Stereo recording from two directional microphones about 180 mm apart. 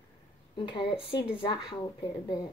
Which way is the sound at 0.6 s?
25° left (ahead or behind).